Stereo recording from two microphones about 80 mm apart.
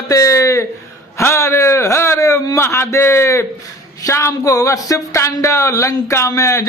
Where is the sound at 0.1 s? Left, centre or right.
Left.